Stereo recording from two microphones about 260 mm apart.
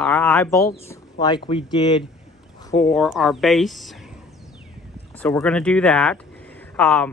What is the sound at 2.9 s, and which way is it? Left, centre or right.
Speech, centre.